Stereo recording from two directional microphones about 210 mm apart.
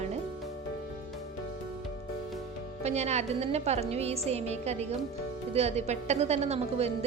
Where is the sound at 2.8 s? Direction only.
30° right (ahead or behind).